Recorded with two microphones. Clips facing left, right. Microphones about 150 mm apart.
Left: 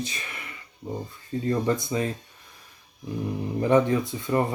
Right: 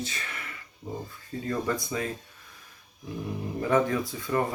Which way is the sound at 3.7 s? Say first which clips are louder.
Left 4 dB; 20° left (ahead or behind).